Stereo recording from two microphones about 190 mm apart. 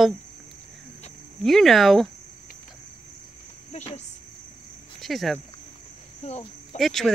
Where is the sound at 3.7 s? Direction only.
35° left (ahead or behind).